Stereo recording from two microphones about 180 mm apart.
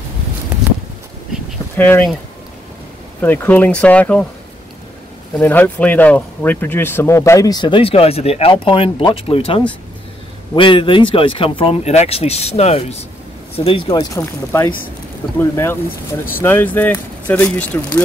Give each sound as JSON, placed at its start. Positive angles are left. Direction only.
{"t": 1.8, "sound": "speech", "side_deg": 10}
{"t": 3.2, "sound": "speech", "side_deg": 10}
{"t": 5.4, "sound": "speech", "side_deg": 10}
{"t": 13.9, "sound": "speech", "side_deg": 15}